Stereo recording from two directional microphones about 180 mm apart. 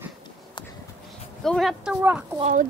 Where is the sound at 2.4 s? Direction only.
45° right (ahead or behind).